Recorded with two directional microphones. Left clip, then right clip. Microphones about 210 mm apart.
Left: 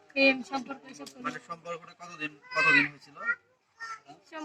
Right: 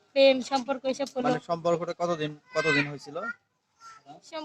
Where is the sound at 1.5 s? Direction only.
45° right (ahead or behind).